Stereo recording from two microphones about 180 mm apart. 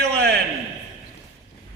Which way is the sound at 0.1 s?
65° right (ahead or behind).